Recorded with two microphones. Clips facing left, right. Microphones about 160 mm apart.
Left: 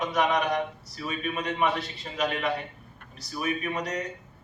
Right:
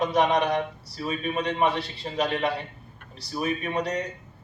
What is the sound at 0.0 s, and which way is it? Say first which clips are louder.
A man's voice: right 3 dB; 30° right (ahead or behind).